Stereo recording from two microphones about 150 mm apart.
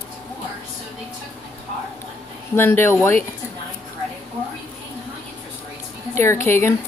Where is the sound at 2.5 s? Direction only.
15° left (ahead or behind).